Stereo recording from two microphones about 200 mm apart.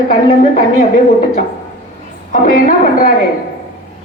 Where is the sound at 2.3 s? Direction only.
40° left (ahead or behind).